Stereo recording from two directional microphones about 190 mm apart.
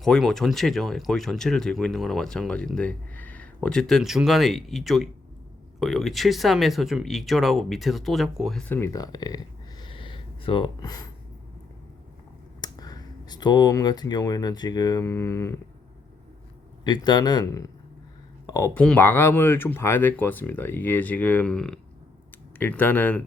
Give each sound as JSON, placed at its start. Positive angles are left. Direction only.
{"t": 0.0, "sound": "speech", "side_deg": 0}
{"t": 12.6, "sound": "speech", "side_deg": 20}
{"t": 16.8, "sound": "speech", "side_deg": 25}